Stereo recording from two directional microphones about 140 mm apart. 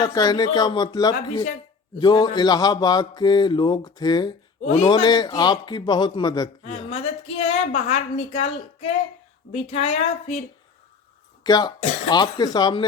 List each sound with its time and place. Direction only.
0.0 s mantra: 25° left (ahead or behind)
4.6 s speech: 55° left (ahead or behind)
4.9 s a man's voice: 30° left (ahead or behind)
7.4 s a woman's voice: 50° left (ahead or behind)
11.4 s mantra: 30° left (ahead or behind)